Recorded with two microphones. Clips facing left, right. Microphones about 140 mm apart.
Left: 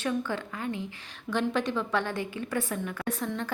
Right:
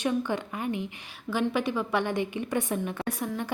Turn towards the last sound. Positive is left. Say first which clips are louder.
# right 1 dB
turn(degrees=-10)  # may be behind; listen again after turning